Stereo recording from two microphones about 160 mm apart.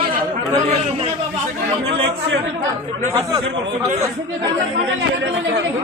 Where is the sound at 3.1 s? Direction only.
20° right (ahead or behind).